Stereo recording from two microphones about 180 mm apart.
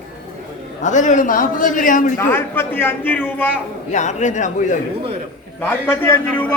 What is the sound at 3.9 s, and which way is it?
Speech, 40° left (ahead or behind).